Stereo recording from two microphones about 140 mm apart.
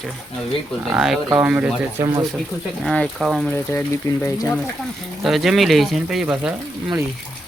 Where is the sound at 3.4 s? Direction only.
15° left (ahead or behind).